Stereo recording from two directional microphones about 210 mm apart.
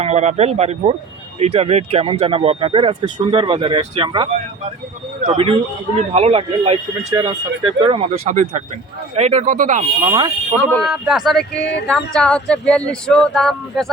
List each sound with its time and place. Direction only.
0.0 s speech: 30° right (ahead or behind)
8.2 s speech: 35° right (ahead or behind)
10.1 s speech: 20° right (ahead or behind)
10.7 s speech: centre (ahead or behind)
11.6 s speech: 55° left (ahead or behind)
11.9 s speech: 5° left (ahead or behind)